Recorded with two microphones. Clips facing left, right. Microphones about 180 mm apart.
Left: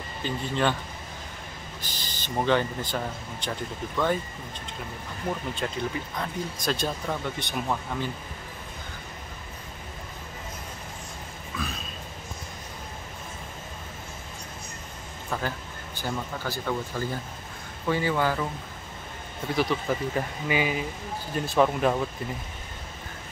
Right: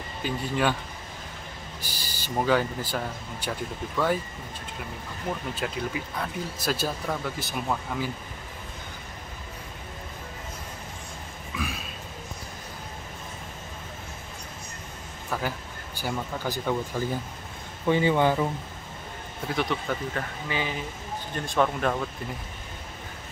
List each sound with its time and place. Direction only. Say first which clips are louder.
0.2 s speech: even; 10° right (ahead or behind)
1.8 s speech: even; 10° right (ahead or behind)
5.5 s speech: even; 5° right (ahead or behind)
11.5 s a sound: right 1 dB; 10° right (ahead or behind)
15.2 s a sound: right 1 dB; 5° right (ahead or behind)
16.0 s speech: right 1 dB; 15° right (ahead or behind)
19.4 s speech: left 2 dB; centre (ahead or behind)
20.2 s speech: left 4 dB; 15° left (ahead or behind)